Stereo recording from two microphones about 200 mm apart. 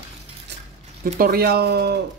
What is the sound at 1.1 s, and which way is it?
Speech, 50° right (ahead or behind).